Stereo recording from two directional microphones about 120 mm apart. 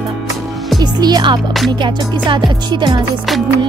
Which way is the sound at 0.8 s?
35° right (ahead or behind).